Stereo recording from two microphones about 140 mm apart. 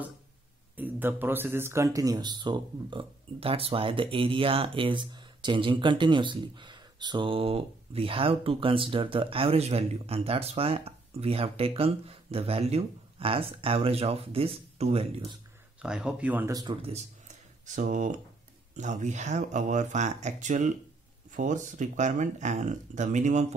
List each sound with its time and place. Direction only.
0.7 s speech: 10° right (ahead or behind); by 15.3 s 45° right (ahead or behind)
15.8 s speech: 5° right (ahead or behind)
17.6 s speech: 65° right (ahead or behind)